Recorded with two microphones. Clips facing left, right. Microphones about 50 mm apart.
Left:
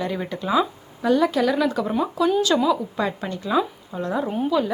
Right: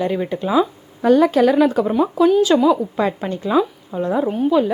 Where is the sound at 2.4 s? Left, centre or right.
Centre.